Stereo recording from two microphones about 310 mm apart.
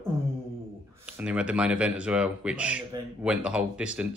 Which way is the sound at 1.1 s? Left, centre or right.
Centre.